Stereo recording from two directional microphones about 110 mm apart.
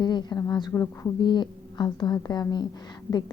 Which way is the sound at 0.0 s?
40° left (ahead or behind).